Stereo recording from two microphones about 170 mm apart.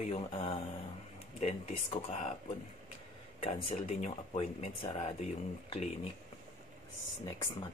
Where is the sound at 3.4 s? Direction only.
35° left (ahead or behind).